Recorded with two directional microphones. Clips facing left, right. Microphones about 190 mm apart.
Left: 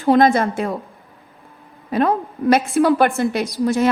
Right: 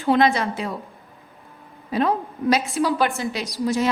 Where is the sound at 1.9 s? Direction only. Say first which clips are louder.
Left 3 dB; 55° left (ahead or behind).